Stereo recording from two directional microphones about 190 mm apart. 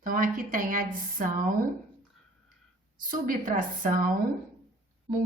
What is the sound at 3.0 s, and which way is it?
A woman's voice, 45° right (ahead or behind).